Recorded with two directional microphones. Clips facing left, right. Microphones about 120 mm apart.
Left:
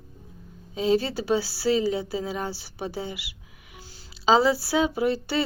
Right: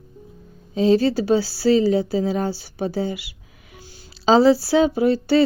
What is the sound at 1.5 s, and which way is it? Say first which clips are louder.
Speech: right 6 dB; 25° left (ahead or behind).